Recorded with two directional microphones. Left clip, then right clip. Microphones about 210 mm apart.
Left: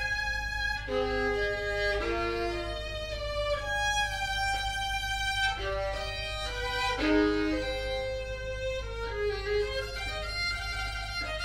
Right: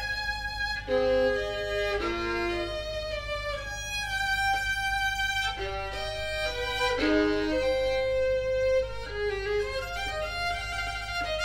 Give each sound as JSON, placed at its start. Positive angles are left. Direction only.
{"t": 0.9, "sound": "music", "side_deg": -35}
{"t": 7.0, "sound": "violin", "side_deg": -30}